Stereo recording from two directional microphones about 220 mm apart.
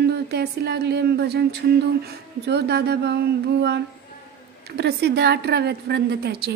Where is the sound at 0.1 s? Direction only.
50° right (ahead or behind).